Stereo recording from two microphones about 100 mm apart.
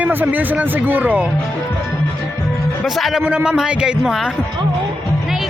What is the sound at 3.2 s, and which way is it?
A man's voice, 15° right (ahead or behind).